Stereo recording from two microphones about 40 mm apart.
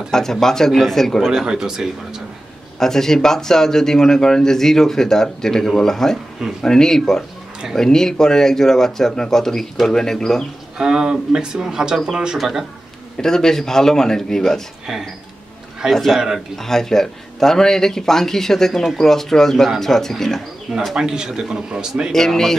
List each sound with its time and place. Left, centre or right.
0.1 s speech: centre
1.4 s speech: centre
2.8 s speech: centre
10.8 s speech: centre
12.4 s speech: centre
13.2 s speech: centre
15.9 s speech: centre
20.9 s speech: centre
22.1 s speech: centre